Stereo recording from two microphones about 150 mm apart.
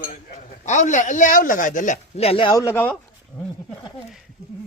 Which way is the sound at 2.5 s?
15° left (ahead or behind).